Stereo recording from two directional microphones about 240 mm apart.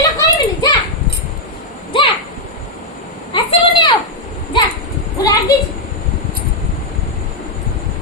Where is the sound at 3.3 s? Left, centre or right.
Left.